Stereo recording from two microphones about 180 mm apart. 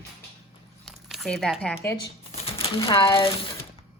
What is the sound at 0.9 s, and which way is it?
Squish, centre (ahead or behind).